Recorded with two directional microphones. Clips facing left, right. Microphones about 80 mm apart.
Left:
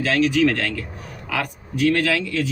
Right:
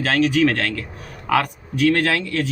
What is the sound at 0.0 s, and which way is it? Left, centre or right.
Speech, right.